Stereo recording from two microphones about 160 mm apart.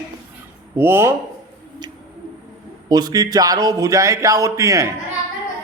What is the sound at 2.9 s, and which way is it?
A man's voice, 25° right (ahead or behind).